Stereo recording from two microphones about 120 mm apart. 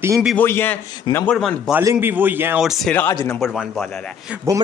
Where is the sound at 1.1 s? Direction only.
40° left (ahead or behind).